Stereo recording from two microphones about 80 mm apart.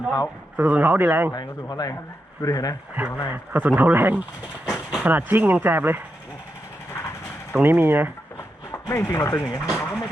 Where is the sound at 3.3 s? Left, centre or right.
Right.